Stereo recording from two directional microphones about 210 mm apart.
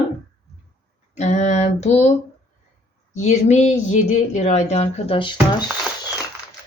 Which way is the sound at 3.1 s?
35° left (ahead or behind).